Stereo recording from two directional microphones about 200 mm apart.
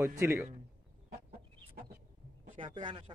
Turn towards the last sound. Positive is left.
turn(degrees=-25)  # may be behind; listen again after turning